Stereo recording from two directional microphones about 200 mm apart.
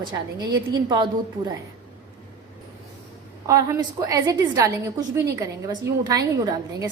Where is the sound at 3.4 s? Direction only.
15° right (ahead or behind).